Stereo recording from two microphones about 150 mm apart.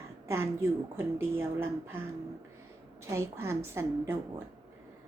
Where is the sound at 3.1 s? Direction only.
15° right (ahead or behind).